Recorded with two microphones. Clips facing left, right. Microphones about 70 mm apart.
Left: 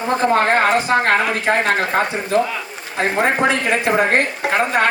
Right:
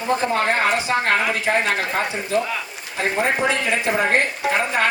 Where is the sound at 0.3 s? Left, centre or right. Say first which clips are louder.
Left 7 dB; left.